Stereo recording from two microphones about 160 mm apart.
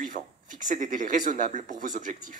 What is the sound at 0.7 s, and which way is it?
Speech, 55° right (ahead or behind).